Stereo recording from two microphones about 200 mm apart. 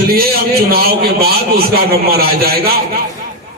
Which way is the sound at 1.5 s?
50° right (ahead or behind).